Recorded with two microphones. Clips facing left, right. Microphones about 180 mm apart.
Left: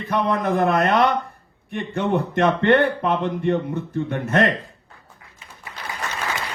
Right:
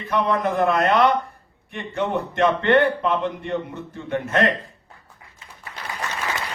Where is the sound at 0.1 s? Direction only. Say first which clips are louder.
Even; 50° left (ahead or behind).